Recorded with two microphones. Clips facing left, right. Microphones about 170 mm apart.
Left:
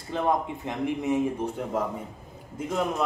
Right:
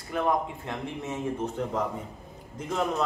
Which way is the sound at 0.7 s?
15° left (ahead or behind).